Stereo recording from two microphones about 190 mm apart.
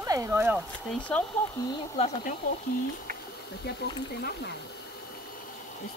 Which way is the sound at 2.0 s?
35° left (ahead or behind).